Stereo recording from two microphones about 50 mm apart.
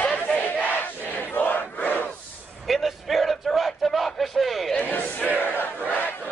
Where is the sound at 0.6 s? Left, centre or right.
Left.